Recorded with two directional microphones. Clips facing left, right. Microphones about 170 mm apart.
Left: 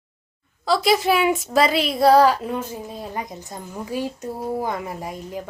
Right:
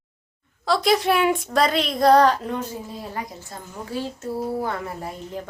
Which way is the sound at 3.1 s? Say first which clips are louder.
Left 2 dB; 20° left (ahead or behind).